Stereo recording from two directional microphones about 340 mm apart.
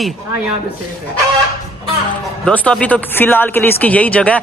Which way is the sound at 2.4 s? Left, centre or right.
Centre.